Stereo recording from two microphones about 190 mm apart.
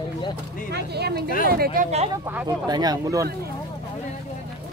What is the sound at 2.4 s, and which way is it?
Speech, 20° right (ahead or behind).